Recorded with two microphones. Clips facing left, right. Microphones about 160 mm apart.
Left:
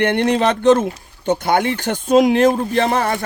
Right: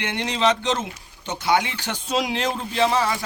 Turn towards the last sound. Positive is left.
turn(degrees=55)  # may be behind; listen again after turning